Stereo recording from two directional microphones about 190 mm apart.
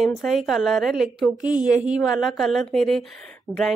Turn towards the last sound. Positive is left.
turn(degrees=5)  # may be behind; listen again after turning